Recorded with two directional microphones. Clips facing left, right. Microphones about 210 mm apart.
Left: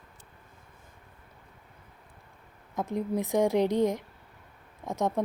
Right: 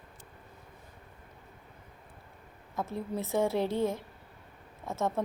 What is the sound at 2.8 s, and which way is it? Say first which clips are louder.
A woman's voice: left 5 dB; 15° left (ahead or behind).